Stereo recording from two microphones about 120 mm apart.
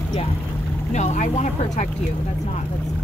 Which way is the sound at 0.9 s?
75° left (ahead or behind).